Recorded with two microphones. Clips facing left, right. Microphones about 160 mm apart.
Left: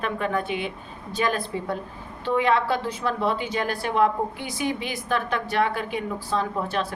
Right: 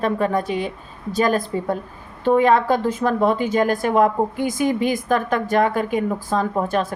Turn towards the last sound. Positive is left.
turn(degrees=-45)  # may be behind; listen again after turning